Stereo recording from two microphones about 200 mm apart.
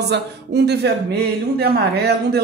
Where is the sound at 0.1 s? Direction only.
55° right (ahead or behind).